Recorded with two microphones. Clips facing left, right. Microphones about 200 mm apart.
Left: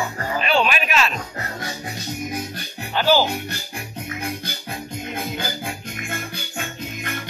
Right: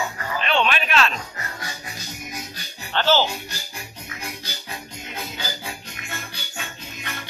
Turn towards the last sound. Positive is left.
turn(degrees=50)  # may be behind; listen again after turning